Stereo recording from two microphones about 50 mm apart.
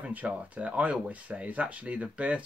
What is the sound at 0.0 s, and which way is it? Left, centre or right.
Speech, right.